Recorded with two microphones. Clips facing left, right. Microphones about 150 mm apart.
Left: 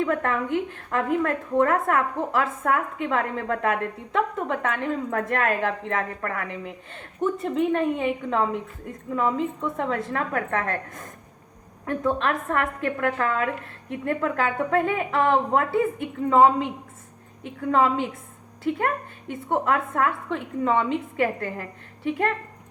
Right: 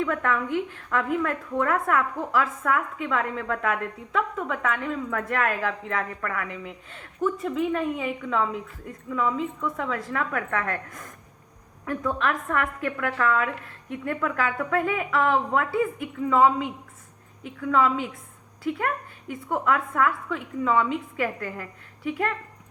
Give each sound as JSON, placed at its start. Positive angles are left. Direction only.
{"t": 0.0, "sound": "a woman's voice", "side_deg": 35}
{"t": 7.6, "sound": "a woman's voice", "side_deg": 45}
{"t": 19.6, "sound": "a woman's voice", "side_deg": 40}